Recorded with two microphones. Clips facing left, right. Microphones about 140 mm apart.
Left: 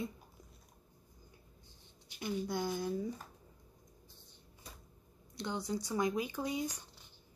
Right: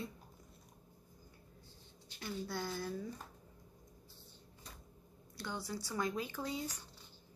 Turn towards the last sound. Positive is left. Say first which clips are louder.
# left 4 dB
turn(degrees=15)  # may be behind; listen again after turning